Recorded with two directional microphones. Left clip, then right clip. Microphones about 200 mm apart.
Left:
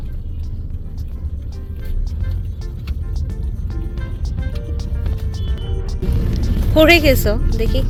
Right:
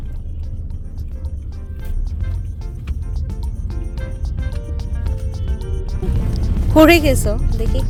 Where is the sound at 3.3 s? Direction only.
Centre (ahead or behind).